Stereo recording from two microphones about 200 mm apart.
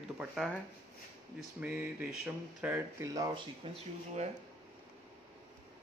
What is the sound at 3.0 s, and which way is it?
Speech, 20° right (ahead or behind).